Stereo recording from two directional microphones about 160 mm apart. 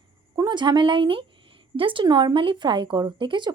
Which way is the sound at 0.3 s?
30° right (ahead or behind).